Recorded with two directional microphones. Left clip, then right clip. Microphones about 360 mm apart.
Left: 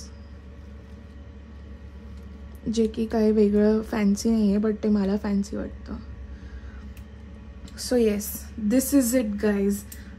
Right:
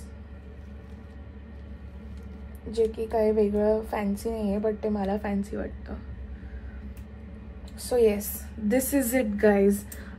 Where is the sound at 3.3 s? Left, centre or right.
Left.